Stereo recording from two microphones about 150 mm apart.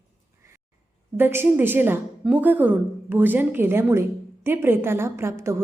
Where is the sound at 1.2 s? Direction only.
15° right (ahead or behind).